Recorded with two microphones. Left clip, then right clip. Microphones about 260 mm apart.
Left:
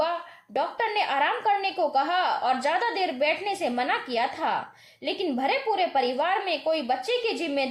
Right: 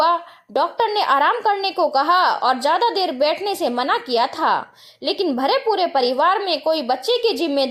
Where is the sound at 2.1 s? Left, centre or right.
Right.